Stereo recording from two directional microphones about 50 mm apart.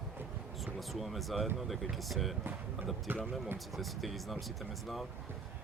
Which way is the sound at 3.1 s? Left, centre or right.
Right.